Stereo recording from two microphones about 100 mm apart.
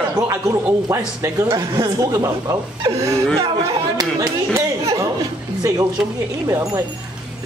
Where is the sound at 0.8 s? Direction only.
30° right (ahead or behind).